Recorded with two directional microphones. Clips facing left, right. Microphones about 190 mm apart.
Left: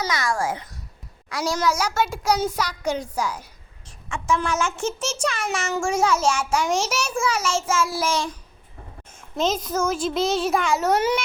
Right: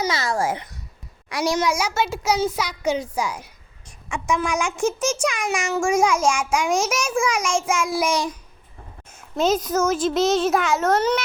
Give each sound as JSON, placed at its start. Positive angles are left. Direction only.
{"t": 0.0, "sound": "a child's voice", "side_deg": -25}
{"t": 9.1, "sound": "a sound", "side_deg": -5}
{"t": 9.7, "sound": "a child's voice", "side_deg": 0}